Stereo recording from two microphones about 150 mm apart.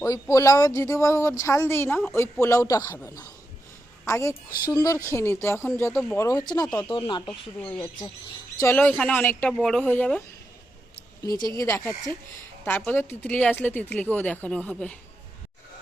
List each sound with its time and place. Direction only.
0.0 s speech: 25° left (ahead or behind)
7.6 s speech: 5° left (ahead or behind)
11.5 s speech: 20° left (ahead or behind)